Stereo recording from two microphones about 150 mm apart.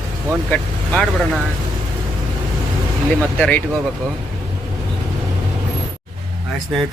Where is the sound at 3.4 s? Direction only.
10° left (ahead or behind).